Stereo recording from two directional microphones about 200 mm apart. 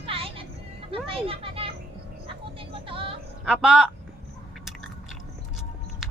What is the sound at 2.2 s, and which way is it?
Music, 25° right (ahead or behind).